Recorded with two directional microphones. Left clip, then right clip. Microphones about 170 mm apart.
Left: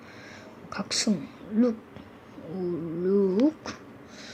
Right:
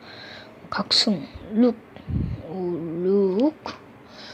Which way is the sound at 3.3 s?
15° left (ahead or behind).